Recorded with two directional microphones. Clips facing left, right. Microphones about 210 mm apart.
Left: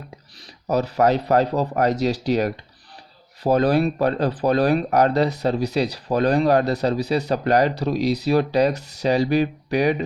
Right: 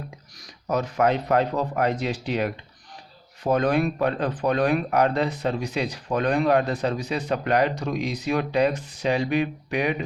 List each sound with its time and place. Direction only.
0.4 s speech: 35° left (ahead or behind)